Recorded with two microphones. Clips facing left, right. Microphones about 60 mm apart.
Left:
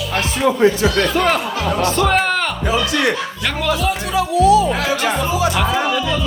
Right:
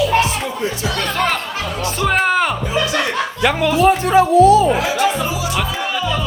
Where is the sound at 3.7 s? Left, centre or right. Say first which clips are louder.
Right 7 dB; right.